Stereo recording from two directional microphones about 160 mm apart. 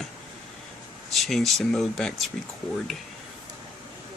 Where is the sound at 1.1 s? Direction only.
Centre (ahead or behind).